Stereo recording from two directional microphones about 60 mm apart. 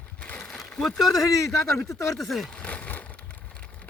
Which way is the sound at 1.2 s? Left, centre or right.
Left.